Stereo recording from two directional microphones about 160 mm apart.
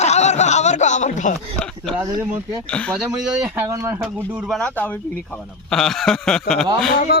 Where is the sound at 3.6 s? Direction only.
20° right (ahead or behind).